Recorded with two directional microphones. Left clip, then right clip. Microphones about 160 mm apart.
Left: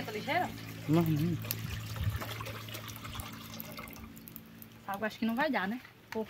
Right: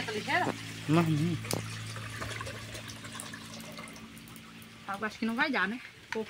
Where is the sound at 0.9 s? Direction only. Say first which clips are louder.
Right 2 dB; centre (ahead or behind).